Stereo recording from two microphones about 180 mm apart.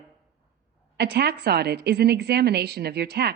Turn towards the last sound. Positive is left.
turn(degrees=-65)  # may be behind; listen again after turning